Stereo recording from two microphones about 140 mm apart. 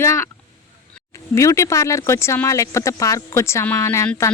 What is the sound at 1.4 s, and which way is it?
Speech, 20° left (ahead or behind).